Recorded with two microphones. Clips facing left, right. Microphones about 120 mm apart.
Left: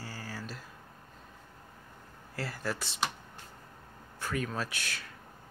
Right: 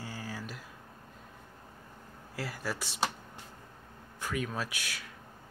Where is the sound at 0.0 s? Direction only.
15° right (ahead or behind).